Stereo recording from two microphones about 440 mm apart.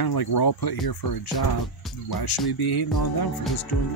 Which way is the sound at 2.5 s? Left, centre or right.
Left.